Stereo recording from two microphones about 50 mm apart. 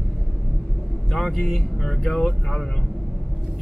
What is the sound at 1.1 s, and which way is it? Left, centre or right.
Speech, centre.